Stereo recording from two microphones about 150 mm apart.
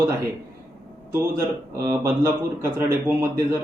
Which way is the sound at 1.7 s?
20° right (ahead or behind).